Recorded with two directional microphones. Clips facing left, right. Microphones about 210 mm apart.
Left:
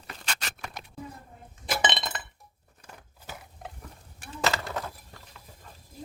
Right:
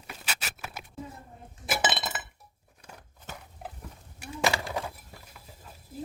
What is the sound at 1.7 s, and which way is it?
Chink, 5° right (ahead or behind).